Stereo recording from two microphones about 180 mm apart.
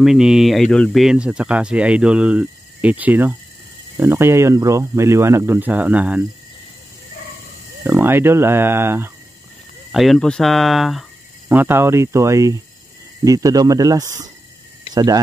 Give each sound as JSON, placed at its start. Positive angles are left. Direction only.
{"t": 0.0, "sound": "speech", "side_deg": -5}
{"t": 7.8, "sound": "speech", "side_deg": -10}
{"t": 9.9, "sound": "speech", "side_deg": 0}